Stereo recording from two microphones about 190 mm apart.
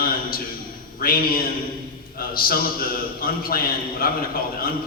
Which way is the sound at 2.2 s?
50° left (ahead or behind).